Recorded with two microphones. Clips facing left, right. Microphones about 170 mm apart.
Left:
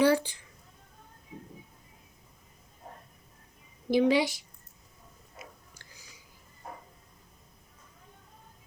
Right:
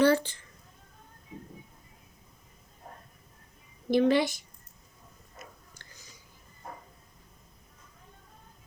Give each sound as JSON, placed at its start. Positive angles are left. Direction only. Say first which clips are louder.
{"t": 0.0, "sound": "speech", "louder": "right 1 dB", "side_deg": 10}
{"t": 3.8, "sound": "a woman's voice", "louder": "even", "side_deg": 10}
{"t": 4.2, "sound": "speech", "louder": "even", "side_deg": -50}
{"t": 5.4, "sound": "a sound", "louder": "even", "side_deg": 10}